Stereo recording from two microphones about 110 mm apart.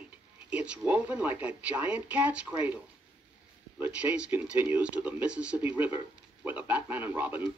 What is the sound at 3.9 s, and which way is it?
A man's voice, 10° right (ahead or behind).